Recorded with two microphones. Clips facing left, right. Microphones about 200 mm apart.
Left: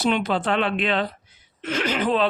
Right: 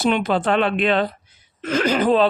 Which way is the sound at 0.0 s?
50° right (ahead or behind).